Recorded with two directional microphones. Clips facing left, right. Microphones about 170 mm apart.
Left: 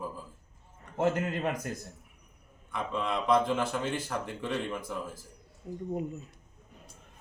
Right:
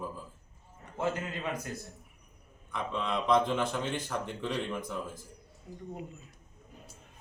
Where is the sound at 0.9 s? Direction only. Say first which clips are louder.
Left 5 dB; 50° left (ahead or behind).